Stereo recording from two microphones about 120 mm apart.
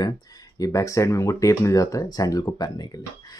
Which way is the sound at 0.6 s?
25° left (ahead or behind).